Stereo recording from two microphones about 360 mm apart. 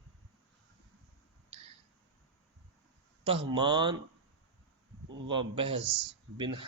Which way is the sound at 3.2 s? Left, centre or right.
Centre.